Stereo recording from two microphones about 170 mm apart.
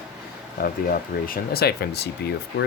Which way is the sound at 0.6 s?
55° left (ahead or behind).